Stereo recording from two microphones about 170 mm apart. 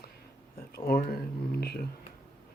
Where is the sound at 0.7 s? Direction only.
65° left (ahead or behind).